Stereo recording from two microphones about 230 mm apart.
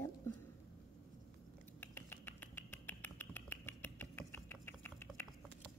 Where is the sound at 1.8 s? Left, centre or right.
Centre.